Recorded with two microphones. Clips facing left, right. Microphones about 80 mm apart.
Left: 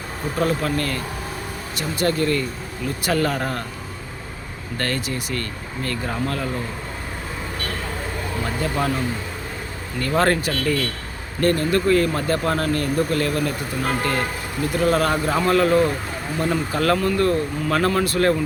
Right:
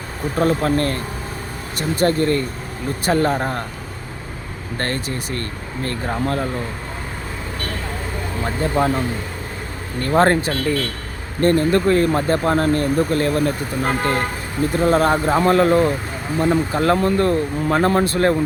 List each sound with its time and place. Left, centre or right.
0.3 s speech: right
4.8 s speech: right
8.4 s speech: right